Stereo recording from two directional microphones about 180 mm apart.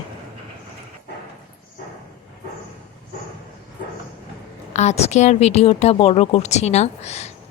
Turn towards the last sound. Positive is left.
turn(degrees=35)  # may be behind; listen again after turning